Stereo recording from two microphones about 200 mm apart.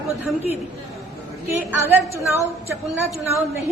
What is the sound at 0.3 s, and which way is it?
A woman's voice, 10° right (ahead or behind).